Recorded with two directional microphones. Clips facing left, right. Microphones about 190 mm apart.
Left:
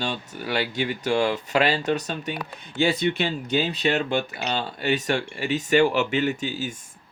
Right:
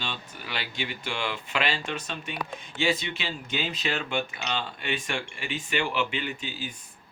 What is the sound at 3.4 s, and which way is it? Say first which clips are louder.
Speech: left 7 dB; 35° left (ahead or behind).